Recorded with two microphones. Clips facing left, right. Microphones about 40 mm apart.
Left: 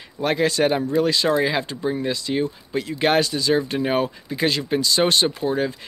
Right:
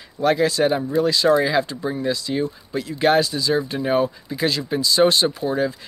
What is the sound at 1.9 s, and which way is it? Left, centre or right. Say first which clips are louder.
Speech: right 2 dB; left.